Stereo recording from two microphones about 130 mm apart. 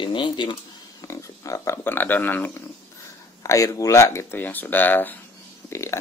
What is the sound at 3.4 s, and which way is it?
Speech, 25° left (ahead or behind).